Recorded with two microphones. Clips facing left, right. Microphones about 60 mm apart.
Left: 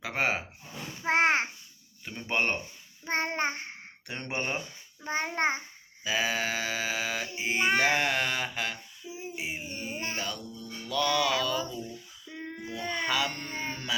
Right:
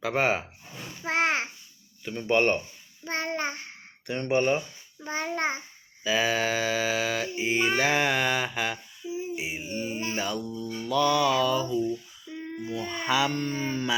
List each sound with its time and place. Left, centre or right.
0.0 s mantra: centre
1.0 s child singing: left
2.0 s speech: centre
3.0 s child singing: left
4.0 s speech: centre
5.0 s child singing: left
6.1 s mantra: centre
10.2 s mantra: centre
12.4 s a sound: left
12.9 s mantra: centre